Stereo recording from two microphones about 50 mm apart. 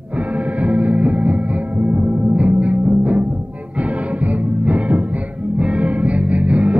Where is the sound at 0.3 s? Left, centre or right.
Right.